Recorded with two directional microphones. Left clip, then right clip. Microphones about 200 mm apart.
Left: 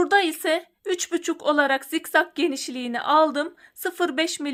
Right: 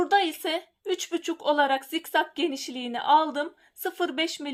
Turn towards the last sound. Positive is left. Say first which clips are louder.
# left 4 dB
turn(degrees=30)  # may be behind; listen again after turning